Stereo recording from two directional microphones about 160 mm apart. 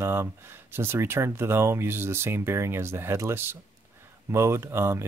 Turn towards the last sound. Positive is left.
turn(degrees=-15)  # may be behind; listen again after turning